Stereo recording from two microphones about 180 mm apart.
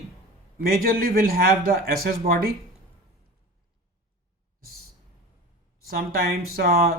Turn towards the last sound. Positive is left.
turn(degrees=-60)  # may be behind; listen again after turning